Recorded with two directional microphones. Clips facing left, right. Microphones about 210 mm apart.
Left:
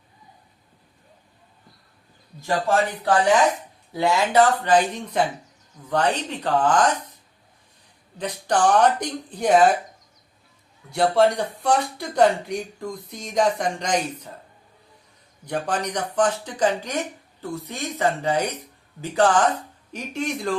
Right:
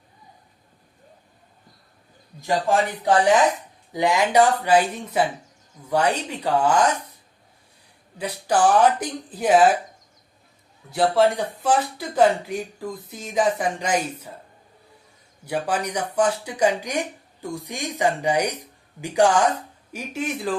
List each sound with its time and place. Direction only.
2.4 s speech: 15° right (ahead or behind)
8.2 s speech: 5° right (ahead or behind)
10.9 s speech: centre (ahead or behind)
15.4 s speech: 10° right (ahead or behind)